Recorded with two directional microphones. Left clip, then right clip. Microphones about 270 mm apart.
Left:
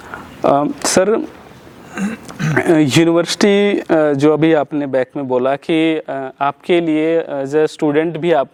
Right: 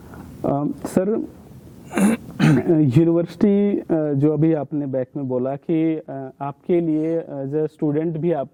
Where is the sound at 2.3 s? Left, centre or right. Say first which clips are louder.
Left 8 dB; centre.